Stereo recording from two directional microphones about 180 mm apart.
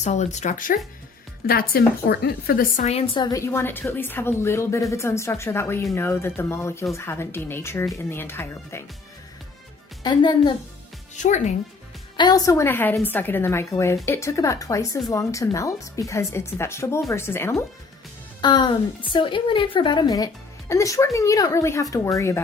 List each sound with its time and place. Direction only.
0.0 s a woman's voice: 40° left (ahead or behind); by 2.8 s 55° left (ahead or behind)
2.8 s speech: 35° left (ahead or behind)
3.3 s speech: 15° left (ahead or behind)
10.0 s a woman's voice: 25° left (ahead or behind)
11.1 s speech: 40° left (ahead or behind)
12.1 s speech: 20° left (ahead or behind)
18.3 s a woman's voice: 25° left (ahead or behind)